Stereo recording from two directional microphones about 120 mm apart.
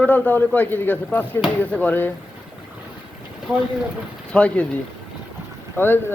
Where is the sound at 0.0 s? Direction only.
15° left (ahead or behind).